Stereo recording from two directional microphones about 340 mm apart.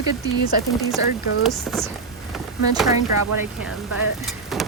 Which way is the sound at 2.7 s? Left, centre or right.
Centre.